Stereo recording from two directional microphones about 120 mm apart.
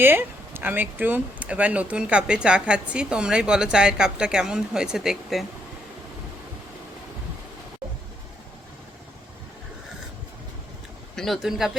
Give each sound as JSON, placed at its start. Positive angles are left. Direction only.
{"t": 0.0, "sound": "speech", "side_deg": -15}
{"t": 11.1, "sound": "speech", "side_deg": 5}